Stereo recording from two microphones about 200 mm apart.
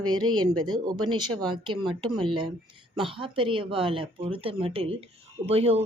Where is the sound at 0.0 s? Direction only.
20° right (ahead or behind).